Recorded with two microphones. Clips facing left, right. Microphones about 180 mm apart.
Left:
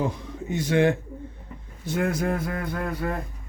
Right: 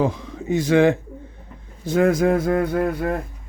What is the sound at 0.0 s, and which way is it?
Speech, 90° right.